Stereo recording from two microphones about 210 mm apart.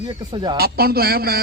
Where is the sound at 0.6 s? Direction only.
45° right (ahead or behind).